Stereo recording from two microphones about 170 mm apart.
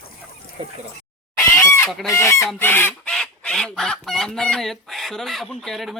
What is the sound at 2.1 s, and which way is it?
Goose, 15° left (ahead or behind).